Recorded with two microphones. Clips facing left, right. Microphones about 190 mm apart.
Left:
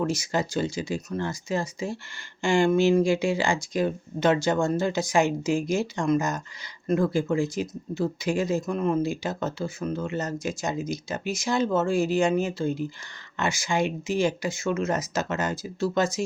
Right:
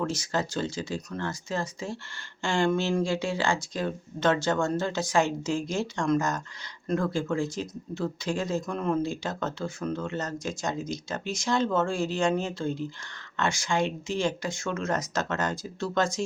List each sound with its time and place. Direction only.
0.0 s speech: 10° left (ahead or behind)